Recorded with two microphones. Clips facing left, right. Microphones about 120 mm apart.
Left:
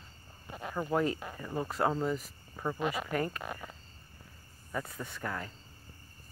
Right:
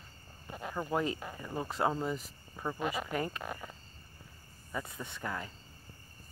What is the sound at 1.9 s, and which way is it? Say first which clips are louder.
Speech: left 3 dB; 10° right (ahead or behind).